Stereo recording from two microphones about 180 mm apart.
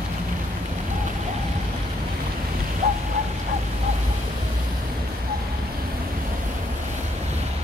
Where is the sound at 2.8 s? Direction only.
55° right (ahead or behind).